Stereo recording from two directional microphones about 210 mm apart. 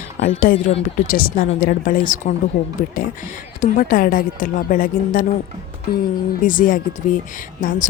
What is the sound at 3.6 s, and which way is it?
Speech, 40° left (ahead or behind).